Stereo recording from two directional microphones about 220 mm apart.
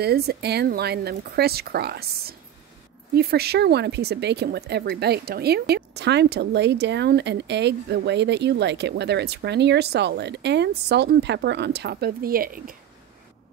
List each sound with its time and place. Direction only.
0.0 s speech: 45° right (ahead or behind)